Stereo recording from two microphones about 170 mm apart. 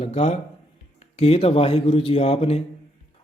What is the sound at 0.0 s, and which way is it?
A man's voice, 40° left (ahead or behind).